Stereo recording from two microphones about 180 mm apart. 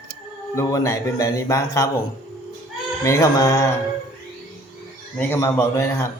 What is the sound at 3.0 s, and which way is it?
Speech, 15° left (ahead or behind).